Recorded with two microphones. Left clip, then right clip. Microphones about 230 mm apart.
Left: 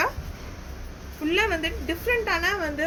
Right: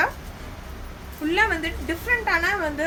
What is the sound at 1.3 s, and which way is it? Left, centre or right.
A woman's voice, centre.